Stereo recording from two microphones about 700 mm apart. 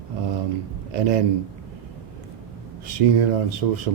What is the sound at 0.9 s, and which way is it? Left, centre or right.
Speech, right.